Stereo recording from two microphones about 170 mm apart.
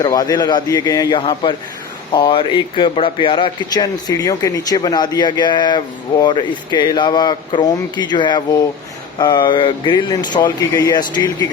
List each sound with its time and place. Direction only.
0.0 s speech: 20° left (ahead or behind)